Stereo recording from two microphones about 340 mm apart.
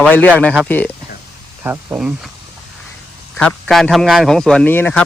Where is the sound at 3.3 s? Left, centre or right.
Centre.